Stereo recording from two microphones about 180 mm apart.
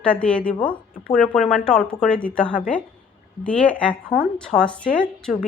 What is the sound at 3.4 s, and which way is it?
Speech, 5° left (ahead or behind).